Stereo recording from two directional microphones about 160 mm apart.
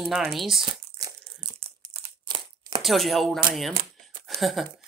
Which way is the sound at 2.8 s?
Centre (ahead or behind).